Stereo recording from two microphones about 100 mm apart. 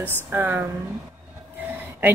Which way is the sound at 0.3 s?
20° right (ahead or behind).